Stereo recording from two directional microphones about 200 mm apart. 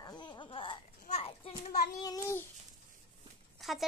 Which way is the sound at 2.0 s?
15° left (ahead or behind).